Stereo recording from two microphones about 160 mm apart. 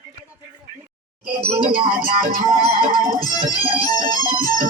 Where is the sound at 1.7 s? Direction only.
65° right (ahead or behind).